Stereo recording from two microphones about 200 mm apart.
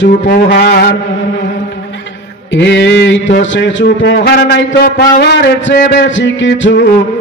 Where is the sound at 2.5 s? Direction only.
60° left (ahead or behind).